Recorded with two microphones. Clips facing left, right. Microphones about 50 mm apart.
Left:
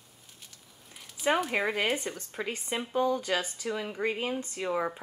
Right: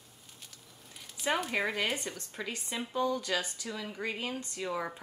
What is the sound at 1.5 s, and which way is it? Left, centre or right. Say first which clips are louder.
Speech: left 3 dB; centre.